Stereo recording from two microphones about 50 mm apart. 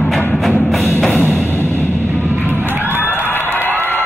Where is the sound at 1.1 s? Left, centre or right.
Left.